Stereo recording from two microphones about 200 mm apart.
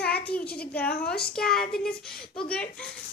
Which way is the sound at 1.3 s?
5° left (ahead or behind).